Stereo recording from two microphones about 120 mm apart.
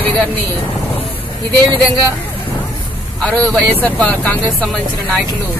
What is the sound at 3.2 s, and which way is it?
Speech, 10° left (ahead or behind).